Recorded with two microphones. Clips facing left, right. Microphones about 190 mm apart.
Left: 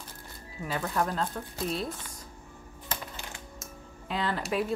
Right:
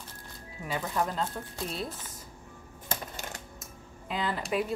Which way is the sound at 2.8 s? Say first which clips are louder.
Right 2 dB; 45° right (ahead or behind).